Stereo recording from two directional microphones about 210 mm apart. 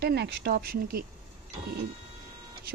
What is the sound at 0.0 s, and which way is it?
Speech, 50° right (ahead or behind).